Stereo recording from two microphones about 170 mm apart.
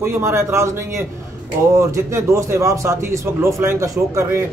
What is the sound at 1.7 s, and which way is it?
A man's voice, 15° right (ahead or behind).